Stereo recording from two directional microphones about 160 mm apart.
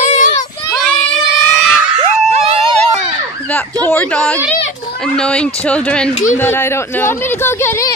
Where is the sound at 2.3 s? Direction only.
40° right (ahead or behind).